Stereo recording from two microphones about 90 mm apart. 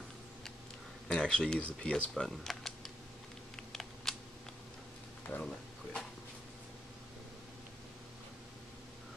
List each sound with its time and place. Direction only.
1.0 s speech: 10° left (ahead or behind)
3.5 s typing: 5° left (ahead or behind)
5.2 s a sound: 20° left (ahead or behind)